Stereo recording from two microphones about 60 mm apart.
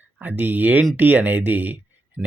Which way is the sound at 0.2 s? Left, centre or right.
Right.